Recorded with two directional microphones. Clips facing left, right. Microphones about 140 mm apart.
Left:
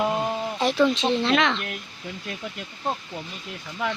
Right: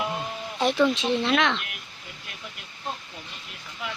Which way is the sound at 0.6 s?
Centre (ahead or behind).